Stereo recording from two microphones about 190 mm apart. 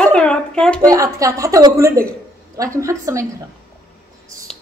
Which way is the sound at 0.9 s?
15° right (ahead or behind).